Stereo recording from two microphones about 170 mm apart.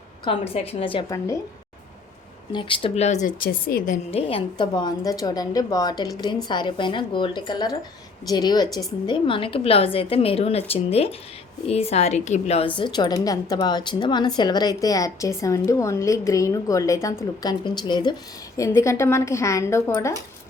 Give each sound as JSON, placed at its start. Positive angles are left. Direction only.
{"t": 0.3, "sound": "a woman's voice", "side_deg": 35}
{"t": 2.5, "sound": "a woman's voice", "side_deg": 30}
{"t": 4.3, "sound": "a woman's voice", "side_deg": 30}